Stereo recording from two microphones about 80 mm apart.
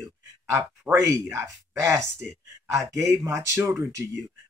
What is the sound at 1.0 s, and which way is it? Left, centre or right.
Speech, right.